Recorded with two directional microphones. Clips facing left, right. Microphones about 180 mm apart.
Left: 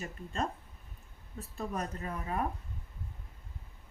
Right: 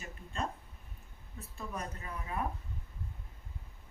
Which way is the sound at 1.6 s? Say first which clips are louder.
Left 5 dB; 45° left (ahead or behind).